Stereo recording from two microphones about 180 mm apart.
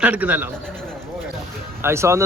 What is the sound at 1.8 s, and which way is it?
Speech, 15° right (ahead or behind).